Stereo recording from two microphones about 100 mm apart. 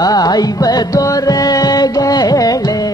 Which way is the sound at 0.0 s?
40° left (ahead or behind).